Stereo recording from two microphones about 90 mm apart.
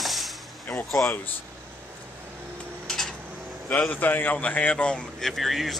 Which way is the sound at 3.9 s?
20° left (ahead or behind).